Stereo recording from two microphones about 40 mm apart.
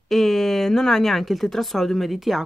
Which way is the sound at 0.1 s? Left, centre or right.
Centre.